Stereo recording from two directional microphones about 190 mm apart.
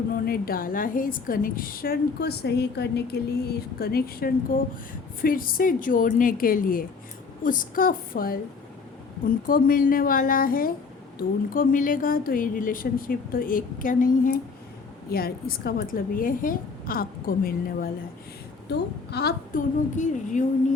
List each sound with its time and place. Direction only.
0.1 s a woman's voice: 50° left (ahead or behind)
20.0 s speech: 40° left (ahead or behind)